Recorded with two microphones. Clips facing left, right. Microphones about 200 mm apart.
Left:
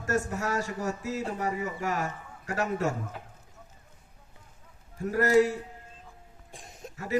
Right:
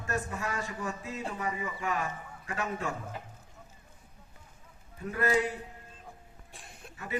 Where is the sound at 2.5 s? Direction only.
75° left (ahead or behind).